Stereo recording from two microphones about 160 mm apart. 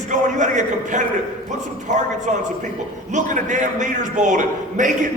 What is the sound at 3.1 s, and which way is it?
A man's voice, 50° right (ahead or behind).